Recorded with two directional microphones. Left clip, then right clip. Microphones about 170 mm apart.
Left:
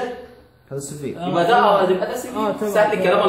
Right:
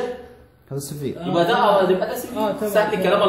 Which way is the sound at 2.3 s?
40° left (ahead or behind).